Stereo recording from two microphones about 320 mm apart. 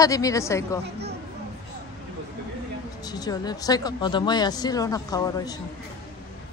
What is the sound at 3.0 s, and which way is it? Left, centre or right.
Speech, centre.